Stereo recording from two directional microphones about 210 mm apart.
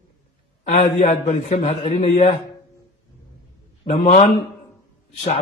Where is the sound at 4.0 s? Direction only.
35° left (ahead or behind).